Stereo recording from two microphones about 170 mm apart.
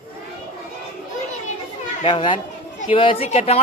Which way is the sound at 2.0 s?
30° left (ahead or behind).